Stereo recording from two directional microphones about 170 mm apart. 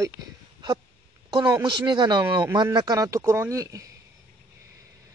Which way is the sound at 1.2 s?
25° right (ahead or behind).